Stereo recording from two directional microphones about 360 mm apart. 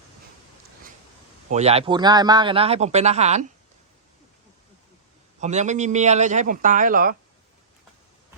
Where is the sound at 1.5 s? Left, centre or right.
Centre.